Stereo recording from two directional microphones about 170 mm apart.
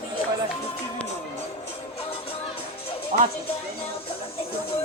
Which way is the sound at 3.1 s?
45° right (ahead or behind).